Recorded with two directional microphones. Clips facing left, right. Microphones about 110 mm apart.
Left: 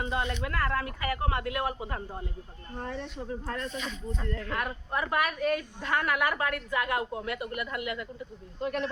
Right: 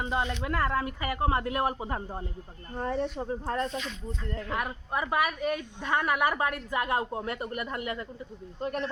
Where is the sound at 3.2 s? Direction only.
30° right (ahead or behind).